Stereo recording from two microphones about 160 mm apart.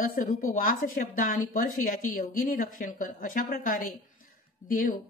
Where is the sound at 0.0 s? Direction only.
60° left (ahead or behind).